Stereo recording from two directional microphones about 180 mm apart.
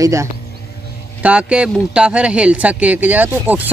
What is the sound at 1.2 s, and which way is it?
Speech, 5° right (ahead or behind).